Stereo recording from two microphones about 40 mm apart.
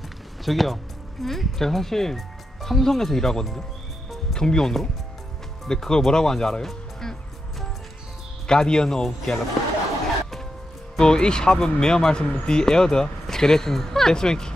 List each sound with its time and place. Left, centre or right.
0.5 s speech: centre
6.7 s music: centre
8.5 s speech: centre
11.0 s speech: centre